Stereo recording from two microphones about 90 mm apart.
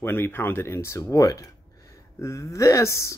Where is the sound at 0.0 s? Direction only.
25° left (ahead or behind).